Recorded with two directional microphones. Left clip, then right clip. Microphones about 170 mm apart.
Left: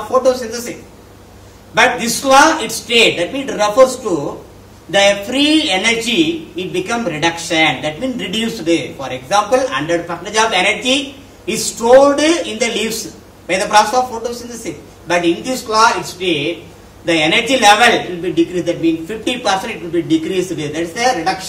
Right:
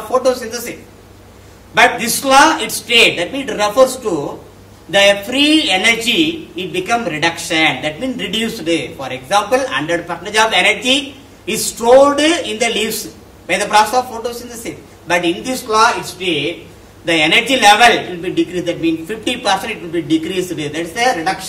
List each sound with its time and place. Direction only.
0.1 s a man's voice: 15° right (ahead or behind)
1.8 s a man's voice: 10° right (ahead or behind)